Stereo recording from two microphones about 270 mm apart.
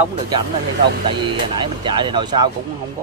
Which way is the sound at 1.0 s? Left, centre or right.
Centre.